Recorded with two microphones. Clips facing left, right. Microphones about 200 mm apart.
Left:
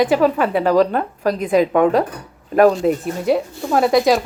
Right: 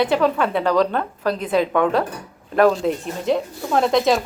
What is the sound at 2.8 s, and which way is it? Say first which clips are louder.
Speech: left 4 dB; 5° left (ahead or behind).